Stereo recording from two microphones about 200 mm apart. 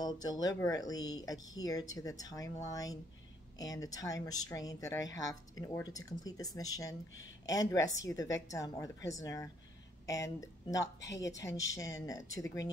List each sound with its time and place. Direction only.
0.0 s speech: 20° left (ahead or behind)